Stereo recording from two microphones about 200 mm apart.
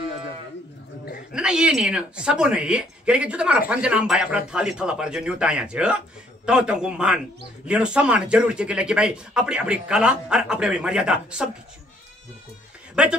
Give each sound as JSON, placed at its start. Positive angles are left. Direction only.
{"t": 1.3, "sound": "speech", "side_deg": -5}
{"t": 13.0, "sound": "speech", "side_deg": -5}